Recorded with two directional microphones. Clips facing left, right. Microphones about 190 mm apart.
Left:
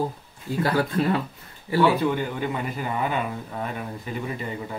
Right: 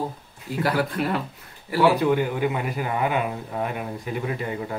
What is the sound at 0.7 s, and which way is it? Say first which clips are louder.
Speech: left 1 dB; 25° left (ahead or behind).